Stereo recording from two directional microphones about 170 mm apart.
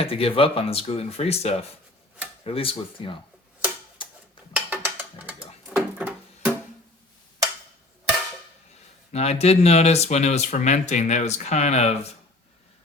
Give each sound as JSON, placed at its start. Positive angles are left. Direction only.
{"t": 0.0, "sound": "speech", "side_deg": 35}
{"t": 4.5, "sound": "music", "side_deg": -10}
{"t": 9.1, "sound": "speech", "side_deg": 40}